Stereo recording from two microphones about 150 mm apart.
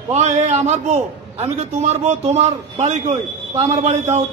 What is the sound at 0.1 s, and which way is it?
A man's voice, 50° right (ahead or behind).